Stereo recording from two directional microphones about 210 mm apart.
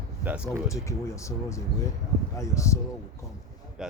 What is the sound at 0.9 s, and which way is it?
Speech, 15° left (ahead or behind).